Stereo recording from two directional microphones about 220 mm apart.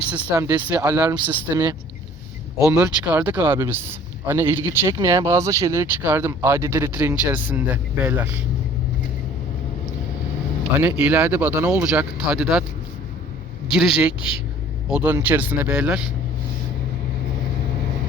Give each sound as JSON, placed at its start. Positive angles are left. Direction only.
{"t": 0.1, "sound": "speech", "side_deg": -10}
{"t": 2.6, "sound": "speech", "side_deg": -15}
{"t": 10.8, "sound": "speech", "side_deg": -5}
{"t": 13.7, "sound": "a man's voice", "side_deg": 0}
{"t": 14.2, "sound": "a woman's voice", "side_deg": 25}
{"t": 14.8, "sound": "speech", "side_deg": -5}